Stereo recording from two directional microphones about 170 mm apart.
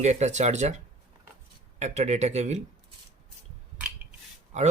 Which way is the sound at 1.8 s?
40° right (ahead or behind).